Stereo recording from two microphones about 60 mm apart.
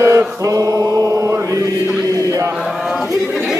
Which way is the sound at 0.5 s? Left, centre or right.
Right.